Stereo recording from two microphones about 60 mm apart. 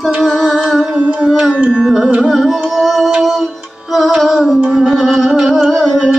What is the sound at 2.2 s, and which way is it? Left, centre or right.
Music, centre.